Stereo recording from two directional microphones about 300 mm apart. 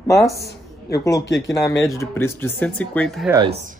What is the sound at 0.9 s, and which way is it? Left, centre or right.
Speech, centre.